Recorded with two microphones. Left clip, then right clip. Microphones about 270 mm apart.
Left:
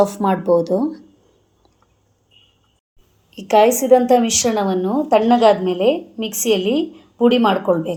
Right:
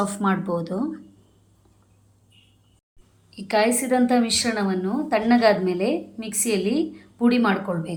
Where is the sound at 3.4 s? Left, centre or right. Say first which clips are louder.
Left 9 dB; left.